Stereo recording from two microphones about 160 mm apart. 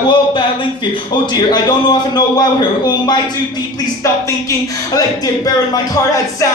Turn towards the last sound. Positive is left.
turn(degrees=20)  # may be behind; listen again after turning